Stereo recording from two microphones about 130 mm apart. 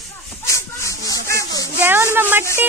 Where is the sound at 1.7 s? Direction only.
15° right (ahead or behind).